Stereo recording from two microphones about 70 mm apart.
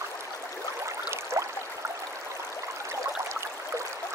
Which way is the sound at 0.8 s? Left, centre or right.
Right.